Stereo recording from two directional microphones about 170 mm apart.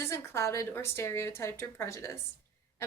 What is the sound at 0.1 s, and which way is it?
A woman's voice, 15° left (ahead or behind).